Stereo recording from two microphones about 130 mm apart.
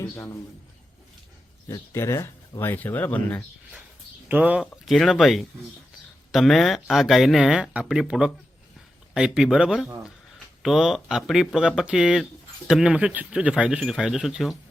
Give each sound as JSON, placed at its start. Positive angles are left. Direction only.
{"t": 1.6, "sound": "speech", "side_deg": 20}
{"t": 4.3, "sound": "speech", "side_deg": -10}